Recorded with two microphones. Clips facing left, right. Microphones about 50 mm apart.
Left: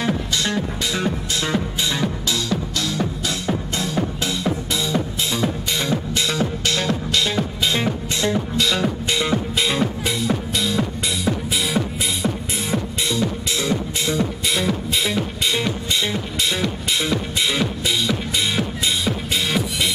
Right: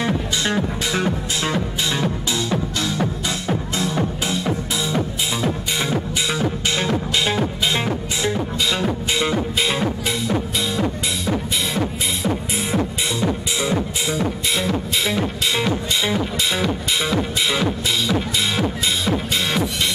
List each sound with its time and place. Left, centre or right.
0.0 s music: centre
12.7 s music: centre